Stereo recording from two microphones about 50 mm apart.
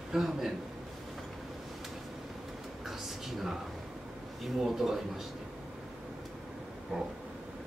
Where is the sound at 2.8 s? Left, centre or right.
Centre.